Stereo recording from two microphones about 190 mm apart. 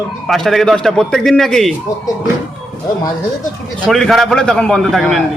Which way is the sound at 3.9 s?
Centre (ahead or behind).